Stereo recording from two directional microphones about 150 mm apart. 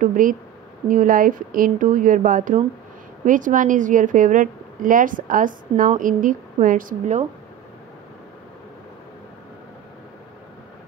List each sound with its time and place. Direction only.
0.0 s a woman's voice: 65° right (ahead or behind)